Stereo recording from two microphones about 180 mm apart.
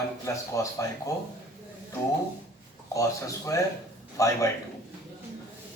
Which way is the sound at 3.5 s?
20° left (ahead or behind).